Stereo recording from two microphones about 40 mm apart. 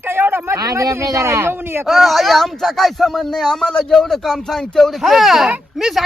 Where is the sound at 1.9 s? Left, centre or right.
Centre.